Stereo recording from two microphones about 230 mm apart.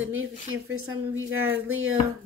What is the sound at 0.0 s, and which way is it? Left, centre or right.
Speech, right.